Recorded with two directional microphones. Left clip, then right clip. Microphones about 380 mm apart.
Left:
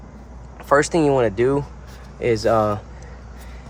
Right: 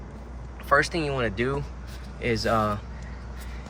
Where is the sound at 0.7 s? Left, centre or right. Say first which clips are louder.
Left 7 dB; centre.